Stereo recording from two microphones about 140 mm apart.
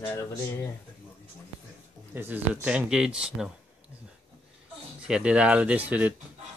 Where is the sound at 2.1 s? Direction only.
15° right (ahead or behind).